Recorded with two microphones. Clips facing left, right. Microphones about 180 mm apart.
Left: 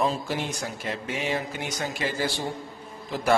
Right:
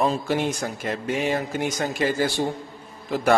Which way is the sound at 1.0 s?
45° right (ahead or behind).